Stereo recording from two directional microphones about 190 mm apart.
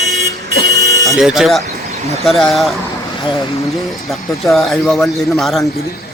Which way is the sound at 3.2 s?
30° left (ahead or behind).